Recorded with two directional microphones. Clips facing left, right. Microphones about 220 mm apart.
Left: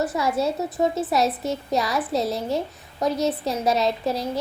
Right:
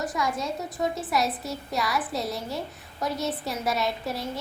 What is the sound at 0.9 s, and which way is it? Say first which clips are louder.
A woman's voice: left 5 dB; centre (ahead or behind).